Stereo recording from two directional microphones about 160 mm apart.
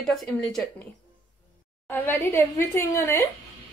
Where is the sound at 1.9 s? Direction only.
15° left (ahead or behind).